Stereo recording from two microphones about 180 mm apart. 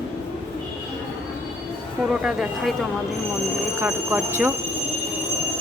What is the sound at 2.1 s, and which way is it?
Speech, 5° right (ahead or behind).